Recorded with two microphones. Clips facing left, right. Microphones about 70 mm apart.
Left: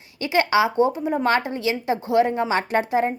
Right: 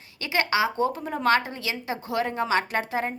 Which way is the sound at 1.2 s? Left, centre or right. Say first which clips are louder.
Even; left.